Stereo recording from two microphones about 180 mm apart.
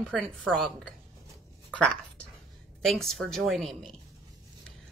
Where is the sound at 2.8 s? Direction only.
Centre (ahead or behind).